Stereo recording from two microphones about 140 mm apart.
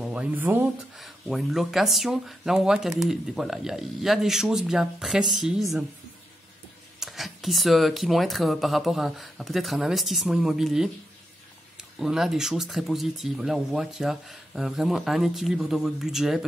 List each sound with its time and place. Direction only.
0.0 s speech: 10° right (ahead or behind)
0.9 s speech: centre (ahead or behind)
7.0 s speech: centre (ahead or behind)
12.0 s speech: 5° right (ahead or behind)